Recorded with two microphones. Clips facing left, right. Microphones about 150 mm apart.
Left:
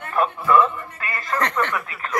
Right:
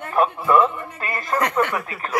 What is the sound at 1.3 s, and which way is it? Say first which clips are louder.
Speech: right 2 dB; 10° right (ahead or behind).